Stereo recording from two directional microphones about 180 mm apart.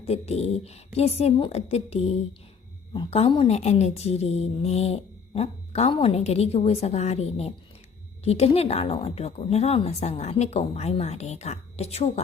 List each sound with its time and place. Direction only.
0.0 s a woman's voice: 35° left (ahead or behind)